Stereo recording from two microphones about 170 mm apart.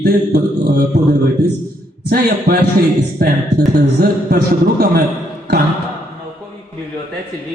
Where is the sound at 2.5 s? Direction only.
70° right (ahead or behind).